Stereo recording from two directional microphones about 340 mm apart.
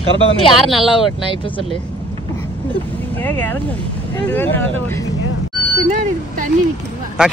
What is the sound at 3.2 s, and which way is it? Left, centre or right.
Speech, centre.